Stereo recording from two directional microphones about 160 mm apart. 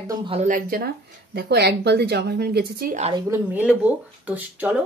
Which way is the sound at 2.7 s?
70° right (ahead or behind).